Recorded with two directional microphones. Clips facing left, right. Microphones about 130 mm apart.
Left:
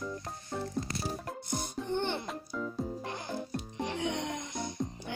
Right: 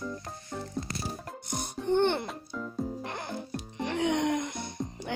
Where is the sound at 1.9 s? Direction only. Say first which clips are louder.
Right 8 dB; 65° right (ahead or behind).